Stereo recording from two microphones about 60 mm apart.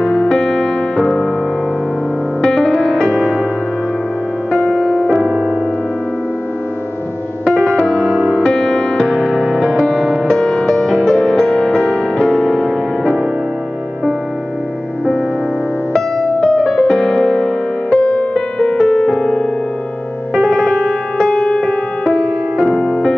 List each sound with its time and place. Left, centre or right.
0.1 s music: centre
2.4 s music: centre
4.5 s music: centre
4.8 s music: centre
5.3 s music: centre
7.4 s music: centre
9.1 s music: centre
15.9 s music: centre
20.4 s music: centre
22.0 s music: centre
22.7 s music: centre